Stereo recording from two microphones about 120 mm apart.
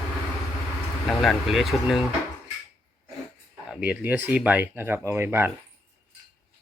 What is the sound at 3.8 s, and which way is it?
Speech, 10° right (ahead or behind).